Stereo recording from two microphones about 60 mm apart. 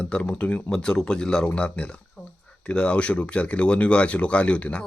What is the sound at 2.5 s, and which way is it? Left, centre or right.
Speech, centre.